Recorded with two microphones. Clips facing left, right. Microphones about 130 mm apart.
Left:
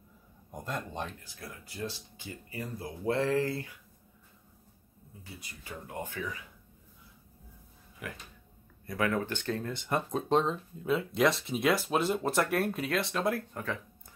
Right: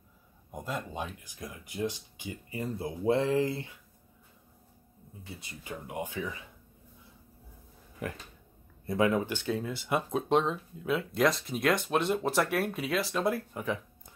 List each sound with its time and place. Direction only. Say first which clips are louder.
0.5 s speech: right 1 dB; 5° right (ahead or behind); by 3.7 s 20° right (ahead or behind)
5.2 s speech: right 3 dB; 25° right (ahead or behind)
8.0 s speech: right 5 dB; 35° right (ahead or behind)
8.8 s speech: right 4 dB; 25° right (ahead or behind)
9.3 s speech: right 2 dB; 10° right (ahead or behind)
13.6 s a sound: right 3 dB; 15° right (ahead or behind)